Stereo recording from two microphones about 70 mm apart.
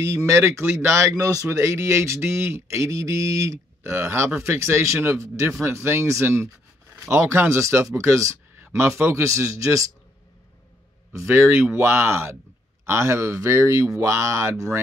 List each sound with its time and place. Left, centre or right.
0.0 s speech: right
11.1 s speech: right